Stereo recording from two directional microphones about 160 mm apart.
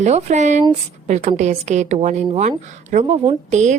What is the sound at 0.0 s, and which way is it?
A woman's voice, 45° right (ahead or behind).